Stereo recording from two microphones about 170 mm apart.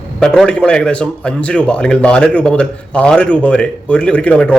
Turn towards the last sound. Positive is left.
turn(degrees=5)  # may be behind; listen again after turning